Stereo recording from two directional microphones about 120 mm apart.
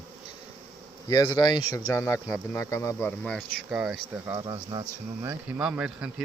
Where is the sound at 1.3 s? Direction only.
35° left (ahead or behind).